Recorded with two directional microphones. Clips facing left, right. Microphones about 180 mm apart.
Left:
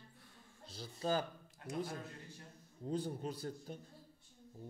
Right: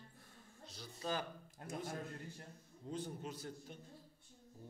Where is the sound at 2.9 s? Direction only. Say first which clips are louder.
Left 5 dB; 35° left (ahead or behind).